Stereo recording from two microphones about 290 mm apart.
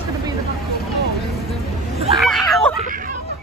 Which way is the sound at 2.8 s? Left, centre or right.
Right.